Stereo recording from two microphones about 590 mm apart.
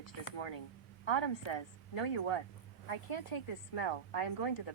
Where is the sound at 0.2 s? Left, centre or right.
Left.